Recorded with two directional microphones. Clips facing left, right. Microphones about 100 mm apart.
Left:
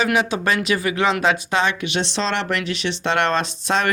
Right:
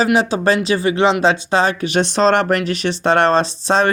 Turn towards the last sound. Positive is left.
turn(degrees=-35)  # may be behind; listen again after turning